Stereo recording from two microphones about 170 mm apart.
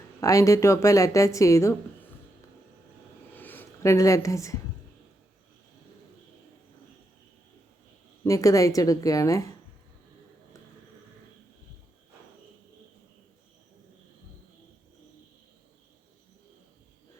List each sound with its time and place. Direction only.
0.2 s a woman's voice: 20° left (ahead or behind)
3.3 s speech: 10° left (ahead or behind)
8.2 s a woman's voice: 20° left (ahead or behind)